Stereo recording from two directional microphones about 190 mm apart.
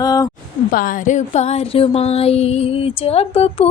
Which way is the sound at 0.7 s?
45° left (ahead or behind).